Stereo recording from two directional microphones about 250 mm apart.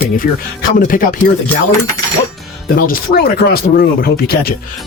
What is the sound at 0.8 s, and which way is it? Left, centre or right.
Speech, left.